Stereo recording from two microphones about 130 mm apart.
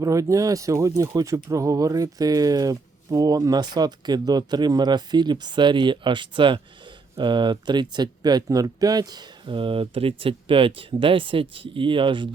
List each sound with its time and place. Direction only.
0.0 s speech: 25° right (ahead or behind); by 12.3 s 40° right (ahead or behind)